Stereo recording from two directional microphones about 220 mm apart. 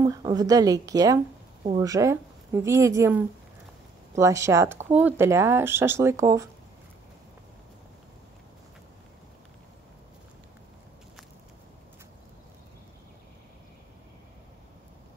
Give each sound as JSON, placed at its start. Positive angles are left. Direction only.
{"t": 0.0, "sound": "a woman's voice", "side_deg": -15}